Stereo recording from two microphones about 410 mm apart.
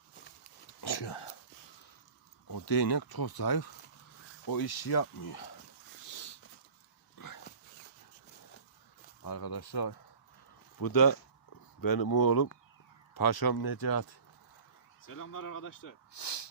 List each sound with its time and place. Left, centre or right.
0.8 s speech: left
2.5 s speech: left
6.1 s a sound: left
9.2 s speech: left
10.8 s speech: left
16.1 s speech: left